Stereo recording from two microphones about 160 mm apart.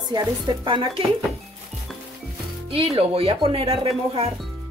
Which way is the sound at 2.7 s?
35° right (ahead or behind).